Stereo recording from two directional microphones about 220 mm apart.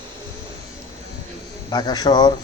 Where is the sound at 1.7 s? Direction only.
20° left (ahead or behind).